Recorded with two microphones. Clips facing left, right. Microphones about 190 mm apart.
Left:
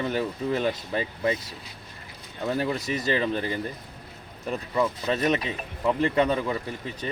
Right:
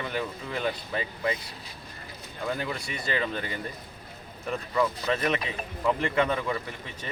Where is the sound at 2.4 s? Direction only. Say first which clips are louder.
Left 5 dB; 30° left (ahead or behind).